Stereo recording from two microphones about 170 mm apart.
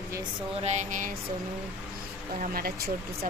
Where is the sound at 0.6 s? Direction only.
45° right (ahead or behind).